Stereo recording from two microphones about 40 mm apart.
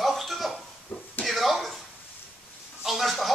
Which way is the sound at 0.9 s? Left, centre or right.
Left.